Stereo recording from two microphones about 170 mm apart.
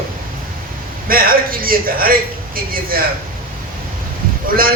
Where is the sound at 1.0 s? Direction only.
60° right (ahead or behind).